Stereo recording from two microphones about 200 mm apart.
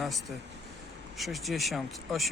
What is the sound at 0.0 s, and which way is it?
Speech, centre (ahead or behind).